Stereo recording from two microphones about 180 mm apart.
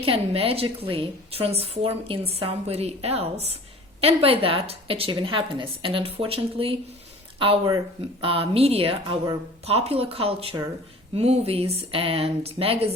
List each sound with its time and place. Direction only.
0.0 s a woman's voice: 30° right (ahead or behind)